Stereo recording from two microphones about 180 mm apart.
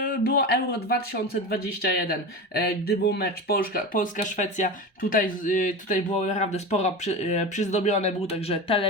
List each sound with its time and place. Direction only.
0.0 s speech: 55° left (ahead or behind); by 8.9 s 30° left (ahead or behind)